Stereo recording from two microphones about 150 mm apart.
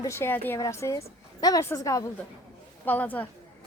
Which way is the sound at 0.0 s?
15° left (ahead or behind).